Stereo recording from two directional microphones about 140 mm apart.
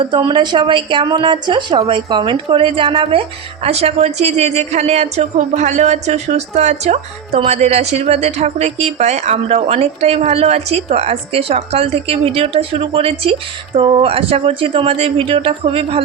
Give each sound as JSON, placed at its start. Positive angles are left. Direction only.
{"t": 0.0, "sound": "speech", "side_deg": -30}